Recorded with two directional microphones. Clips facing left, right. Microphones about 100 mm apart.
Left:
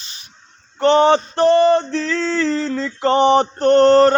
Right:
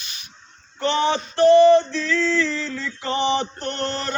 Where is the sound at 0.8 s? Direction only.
45° left (ahead or behind).